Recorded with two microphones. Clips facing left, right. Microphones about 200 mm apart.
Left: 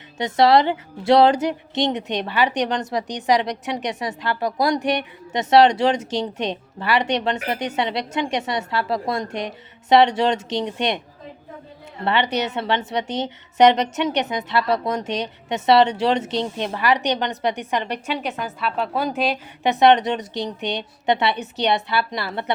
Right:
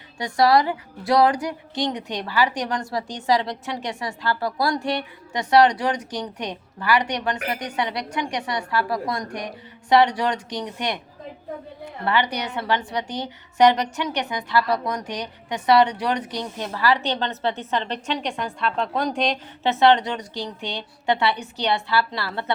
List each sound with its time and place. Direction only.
0.2 s a woman's voice: 25° left (ahead or behind)
12.0 s a woman's voice: 25° left (ahead or behind); by 19.4 s 5° left (ahead or behind)
19.6 s a woman's voice: 15° left (ahead or behind)